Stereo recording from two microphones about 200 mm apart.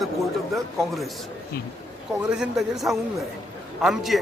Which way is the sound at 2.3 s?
Centre (ahead or behind).